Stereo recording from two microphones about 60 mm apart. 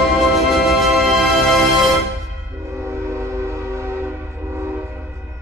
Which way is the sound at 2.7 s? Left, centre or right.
Right.